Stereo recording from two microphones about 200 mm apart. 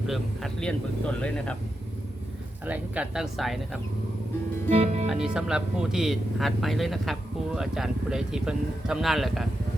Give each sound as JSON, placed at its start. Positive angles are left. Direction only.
{"t": 0.1, "sound": "speech", "side_deg": 5}
{"t": 2.6, "sound": "speech", "side_deg": -5}
{"t": 4.7, "sound": "music", "side_deg": -35}
{"t": 5.0, "sound": "speech", "side_deg": -5}